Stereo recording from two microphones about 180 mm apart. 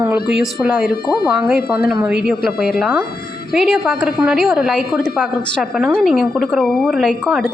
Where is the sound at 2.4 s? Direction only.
55° left (ahead or behind).